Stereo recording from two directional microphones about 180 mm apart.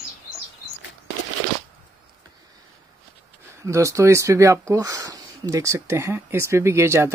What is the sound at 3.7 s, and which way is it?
Speech, 15° right (ahead or behind).